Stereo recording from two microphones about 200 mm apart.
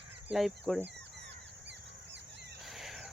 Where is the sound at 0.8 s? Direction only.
60° right (ahead or behind).